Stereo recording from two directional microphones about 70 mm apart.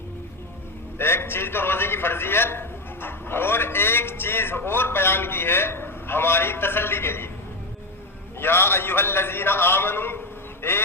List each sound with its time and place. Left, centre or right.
0.9 s a man's voice: left
8.4 s a man's voice: left